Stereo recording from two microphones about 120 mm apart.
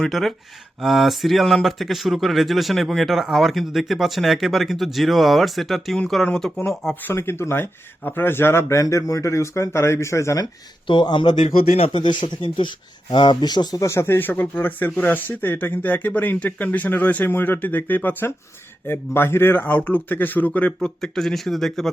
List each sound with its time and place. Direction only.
0.0 s speech: centre (ahead or behind)
7.0 s speech: 20° left (ahead or behind)
10.8 s a man's voice: 40° left (ahead or behind)
11.4 s speech: 55° left (ahead or behind)
11.9 s a man's voice: 45° left (ahead or behind); by 21.8 s centre (ahead or behind)